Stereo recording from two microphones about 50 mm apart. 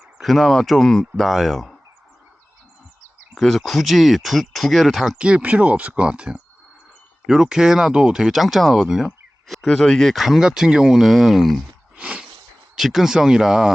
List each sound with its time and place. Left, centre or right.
0.2 s speech: centre
1.1 s speech: centre
3.3 s speech: centre
5.1 s speech: right; by 8.9 s centre
9.0 s a sound: centre
9.6 s speech: centre
10.2 s speech: centre
11.9 s a sound: right
12.7 s speech: centre